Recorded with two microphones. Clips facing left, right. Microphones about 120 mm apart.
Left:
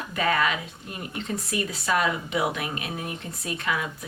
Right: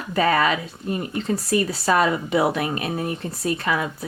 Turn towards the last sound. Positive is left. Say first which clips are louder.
# right 5 dB
turn(degrees=-35)  # may be behind; listen again after turning